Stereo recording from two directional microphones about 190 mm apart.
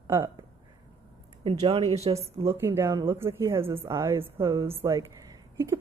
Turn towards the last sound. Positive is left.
turn(degrees=-15)  # may be behind; listen again after turning